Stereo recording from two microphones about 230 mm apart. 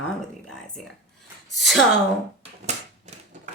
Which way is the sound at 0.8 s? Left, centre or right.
Centre.